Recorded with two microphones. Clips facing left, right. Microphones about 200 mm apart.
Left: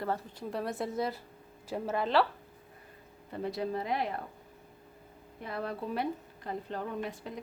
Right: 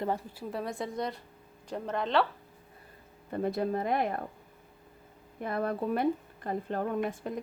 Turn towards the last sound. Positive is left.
turn(degrees=-50)  # may be behind; listen again after turning